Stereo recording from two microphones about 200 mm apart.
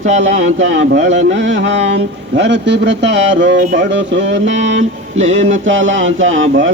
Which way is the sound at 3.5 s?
40° right (ahead or behind).